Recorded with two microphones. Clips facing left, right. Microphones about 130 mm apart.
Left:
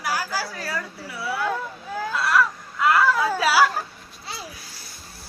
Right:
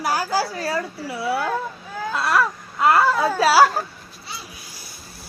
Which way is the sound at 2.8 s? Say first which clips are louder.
Right 2 dB; 30° right (ahead or behind).